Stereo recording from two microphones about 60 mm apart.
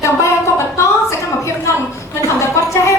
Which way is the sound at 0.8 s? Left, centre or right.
Left.